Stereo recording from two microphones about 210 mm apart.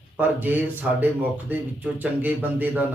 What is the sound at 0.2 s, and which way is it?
A man's voice, 10° right (ahead or behind).